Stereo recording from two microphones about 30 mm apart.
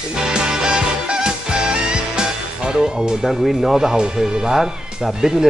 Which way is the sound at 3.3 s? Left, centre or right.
Centre.